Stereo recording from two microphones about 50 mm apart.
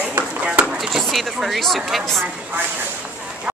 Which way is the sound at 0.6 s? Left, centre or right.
Centre.